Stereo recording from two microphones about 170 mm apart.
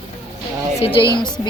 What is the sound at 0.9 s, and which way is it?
Speech, 25° left (ahead or behind).